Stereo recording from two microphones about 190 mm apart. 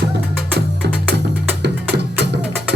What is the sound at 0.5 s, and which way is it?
Music, 60° right (ahead or behind).